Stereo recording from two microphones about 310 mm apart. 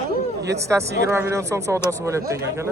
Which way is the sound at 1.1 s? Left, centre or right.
Centre.